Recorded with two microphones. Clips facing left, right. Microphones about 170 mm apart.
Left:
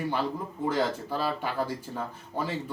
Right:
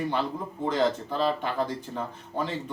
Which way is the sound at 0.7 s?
10° left (ahead or behind).